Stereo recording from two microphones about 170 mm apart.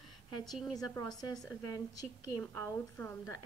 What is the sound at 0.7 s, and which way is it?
A woman's voice, 20° left (ahead or behind).